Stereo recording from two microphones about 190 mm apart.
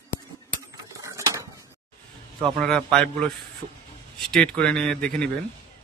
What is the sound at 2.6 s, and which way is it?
Speech, 5° left (ahead or behind).